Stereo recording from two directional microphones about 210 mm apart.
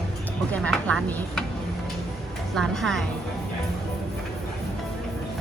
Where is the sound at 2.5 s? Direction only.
Centre (ahead or behind).